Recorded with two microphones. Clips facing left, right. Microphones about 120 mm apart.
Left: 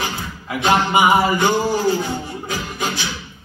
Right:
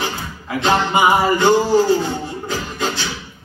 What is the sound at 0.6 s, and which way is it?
Music, 10° left (ahead or behind).